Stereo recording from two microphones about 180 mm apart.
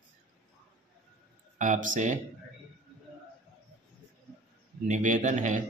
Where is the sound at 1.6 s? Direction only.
45° right (ahead or behind).